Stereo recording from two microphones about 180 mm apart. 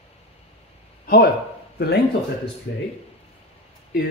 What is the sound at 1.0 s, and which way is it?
Speech, 55° left (ahead or behind).